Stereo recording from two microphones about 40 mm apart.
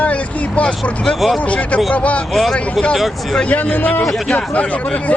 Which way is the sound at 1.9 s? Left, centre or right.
Left.